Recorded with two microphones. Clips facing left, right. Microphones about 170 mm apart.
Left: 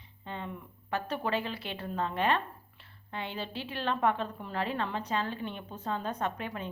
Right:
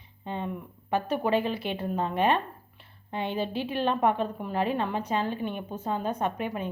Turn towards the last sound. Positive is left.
turn(degrees=-15)  # may be behind; listen again after turning